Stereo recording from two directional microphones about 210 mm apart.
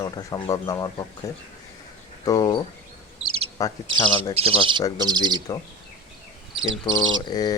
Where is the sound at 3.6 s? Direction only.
15° left (ahead or behind).